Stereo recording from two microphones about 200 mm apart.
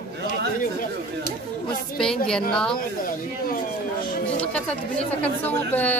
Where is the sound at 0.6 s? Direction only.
45° left (ahead or behind).